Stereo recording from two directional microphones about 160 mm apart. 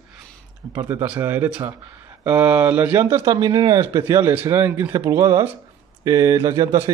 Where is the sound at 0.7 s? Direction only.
15° right (ahead or behind).